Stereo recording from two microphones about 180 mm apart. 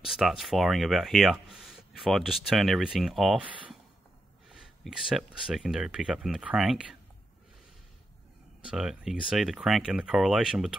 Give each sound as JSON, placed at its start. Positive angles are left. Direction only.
{"t": 0.0, "sound": "speech", "side_deg": 0}
{"t": 4.5, "sound": "a sound", "side_deg": -5}
{"t": 5.1, "sound": "speech", "side_deg": 0}
{"t": 8.6, "sound": "speech", "side_deg": -5}